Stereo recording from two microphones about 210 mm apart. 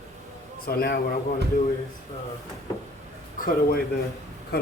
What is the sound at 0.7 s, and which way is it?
Speech, 45° left (ahead or behind).